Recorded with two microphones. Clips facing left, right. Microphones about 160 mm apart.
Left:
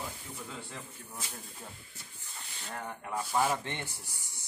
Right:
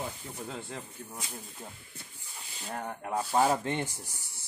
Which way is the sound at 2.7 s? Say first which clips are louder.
Right 4 dB; 30° right (ahead or behind).